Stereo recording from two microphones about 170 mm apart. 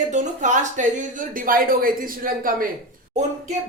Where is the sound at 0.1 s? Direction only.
45° right (ahead or behind).